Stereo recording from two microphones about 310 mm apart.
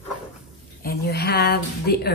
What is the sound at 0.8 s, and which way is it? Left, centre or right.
A woman's voice, left.